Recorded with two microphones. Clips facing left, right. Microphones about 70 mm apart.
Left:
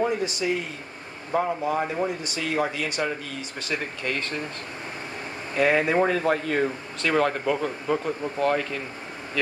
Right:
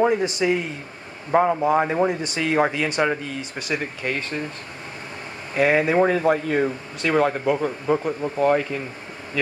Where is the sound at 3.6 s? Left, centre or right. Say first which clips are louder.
Right 3 dB; centre.